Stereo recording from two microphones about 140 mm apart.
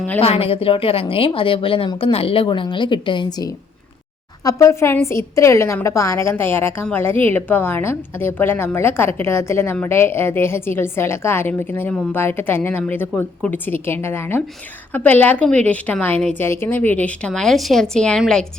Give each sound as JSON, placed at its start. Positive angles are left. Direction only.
{"t": 0.2, "sound": "a woman's voice", "side_deg": 45}